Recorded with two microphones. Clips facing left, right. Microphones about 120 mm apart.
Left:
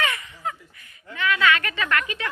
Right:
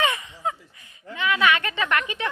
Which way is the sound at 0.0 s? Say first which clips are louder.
Right 3 dB; 20° right (ahead or behind).